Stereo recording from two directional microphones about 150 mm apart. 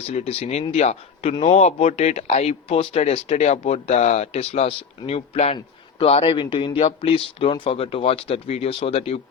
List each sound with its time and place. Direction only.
0.1 s speech: 45° left (ahead or behind)